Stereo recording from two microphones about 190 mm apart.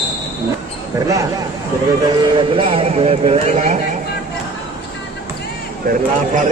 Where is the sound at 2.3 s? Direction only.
25° right (ahead or behind).